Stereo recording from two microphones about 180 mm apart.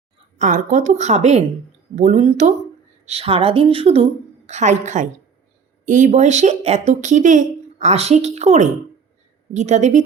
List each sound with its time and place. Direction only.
0.3 s a woman's voice: 45° right (ahead or behind)